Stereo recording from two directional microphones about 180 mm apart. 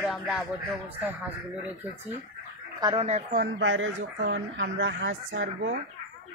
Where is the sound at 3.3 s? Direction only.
90° right.